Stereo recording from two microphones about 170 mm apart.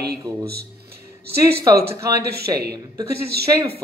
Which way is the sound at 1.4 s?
20° right (ahead or behind).